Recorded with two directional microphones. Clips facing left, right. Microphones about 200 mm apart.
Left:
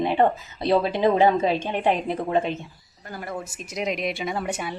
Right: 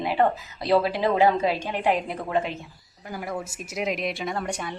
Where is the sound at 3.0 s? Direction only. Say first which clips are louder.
Right 1 dB; 10° right (ahead or behind); by 4.7 s 5° left (ahead or behind).